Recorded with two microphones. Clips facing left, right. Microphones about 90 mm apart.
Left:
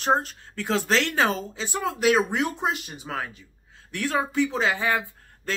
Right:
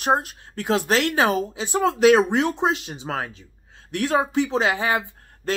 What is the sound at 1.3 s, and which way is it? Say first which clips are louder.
Speech: right 6 dB; 60° right (ahead or behind).